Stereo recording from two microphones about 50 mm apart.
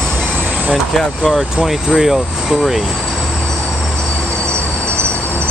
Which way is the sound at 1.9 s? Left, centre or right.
Centre.